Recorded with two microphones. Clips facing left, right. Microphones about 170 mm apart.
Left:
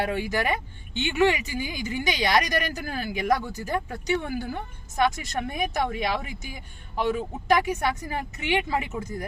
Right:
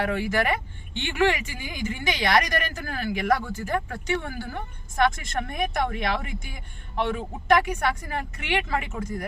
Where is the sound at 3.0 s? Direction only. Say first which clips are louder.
Right 1 dB; 15° left (ahead or behind).